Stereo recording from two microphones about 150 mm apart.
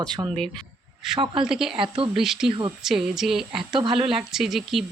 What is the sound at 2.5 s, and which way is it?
Speech, 30° right (ahead or behind).